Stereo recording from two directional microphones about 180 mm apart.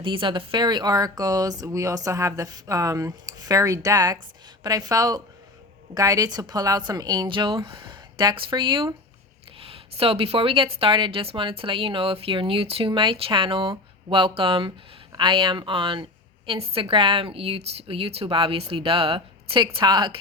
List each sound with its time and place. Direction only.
0.0 s speech: 30° right (ahead or behind)